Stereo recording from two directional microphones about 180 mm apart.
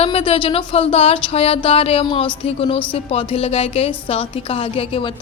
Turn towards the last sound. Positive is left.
turn(degrees=30)  # may be behind; listen again after turning